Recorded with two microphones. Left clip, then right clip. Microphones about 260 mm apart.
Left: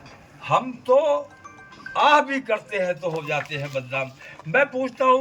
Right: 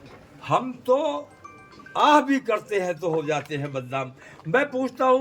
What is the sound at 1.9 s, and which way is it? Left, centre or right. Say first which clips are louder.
A man's voice: left 1 dB; centre.